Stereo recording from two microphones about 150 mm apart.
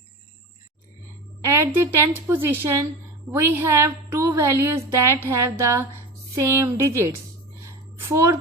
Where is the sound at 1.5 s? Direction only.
15° right (ahead or behind).